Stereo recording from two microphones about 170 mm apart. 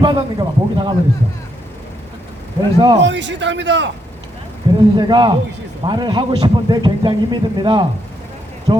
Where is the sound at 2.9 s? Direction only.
90° right.